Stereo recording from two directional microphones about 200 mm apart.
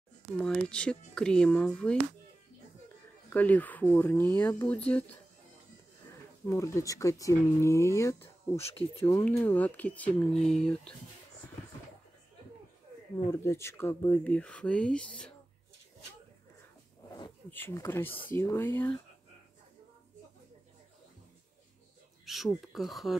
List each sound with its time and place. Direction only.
0.4 s speech: 5° left (ahead or behind)
3.3 s speech: 10° left (ahead or behind)
6.4 s speech: 15° left (ahead or behind)
8.5 s speech: 30° left (ahead or behind)
9.0 s speech: 15° left (ahead or behind)
13.3 s speech: 15° left (ahead or behind)
17.1 s speech: 15° left (ahead or behind)
22.2 s speech: centre (ahead or behind)